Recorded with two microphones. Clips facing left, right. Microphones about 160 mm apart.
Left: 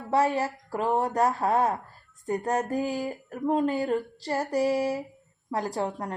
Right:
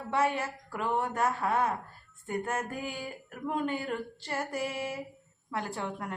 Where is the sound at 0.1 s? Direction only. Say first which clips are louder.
Left 5 dB; 35° left (ahead or behind).